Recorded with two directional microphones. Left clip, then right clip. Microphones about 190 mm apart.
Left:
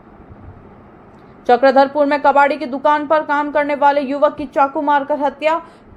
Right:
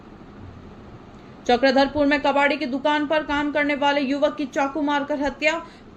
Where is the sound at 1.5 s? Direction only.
10° left (ahead or behind).